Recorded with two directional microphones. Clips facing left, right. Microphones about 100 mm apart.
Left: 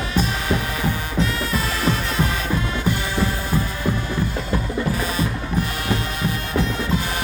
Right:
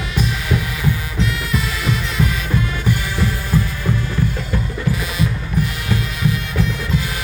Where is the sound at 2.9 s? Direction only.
25° left (ahead or behind).